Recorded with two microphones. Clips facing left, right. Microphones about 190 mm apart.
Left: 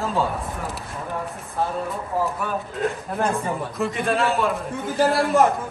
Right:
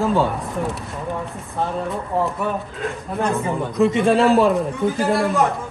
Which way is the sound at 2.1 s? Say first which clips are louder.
Right 3 dB; 25° right (ahead or behind).